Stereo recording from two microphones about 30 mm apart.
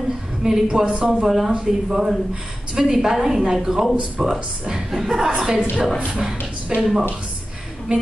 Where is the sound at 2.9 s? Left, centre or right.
Centre.